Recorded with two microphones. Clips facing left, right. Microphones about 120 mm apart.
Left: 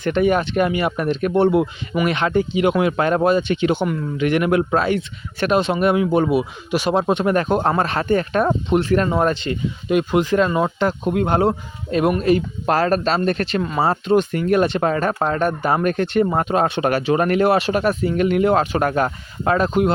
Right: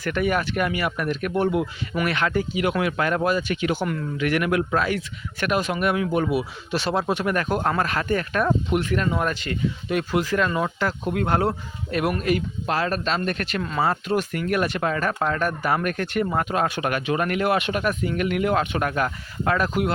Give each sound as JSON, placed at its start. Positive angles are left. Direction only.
{"t": 0.0, "sound": "speech", "side_deg": 25}
{"t": 6.7, "sound": "speech", "side_deg": 15}
{"t": 12.6, "sound": "speech", "side_deg": 45}